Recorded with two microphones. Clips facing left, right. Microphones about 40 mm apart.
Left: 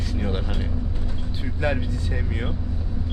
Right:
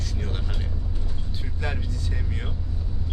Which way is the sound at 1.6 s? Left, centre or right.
Left.